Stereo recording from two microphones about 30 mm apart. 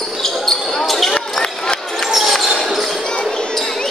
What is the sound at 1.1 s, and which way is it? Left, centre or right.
Basketball bounce, centre.